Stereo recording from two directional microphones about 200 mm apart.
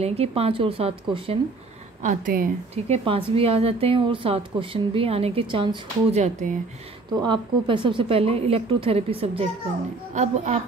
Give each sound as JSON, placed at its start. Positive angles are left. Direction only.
{"t": 0.0, "sound": "speech", "side_deg": -30}
{"t": 2.0, "sound": "speech", "side_deg": -45}
{"t": 2.7, "sound": "speech", "side_deg": -30}
{"t": 7.2, "sound": "a woman's voice", "side_deg": -25}